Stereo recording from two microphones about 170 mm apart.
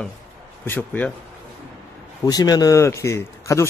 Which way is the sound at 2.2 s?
25° left (ahead or behind).